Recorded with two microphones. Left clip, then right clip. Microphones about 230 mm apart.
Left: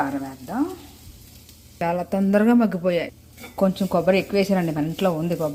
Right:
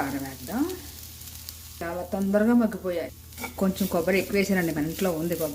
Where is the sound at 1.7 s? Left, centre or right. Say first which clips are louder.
Left 7 dB; left.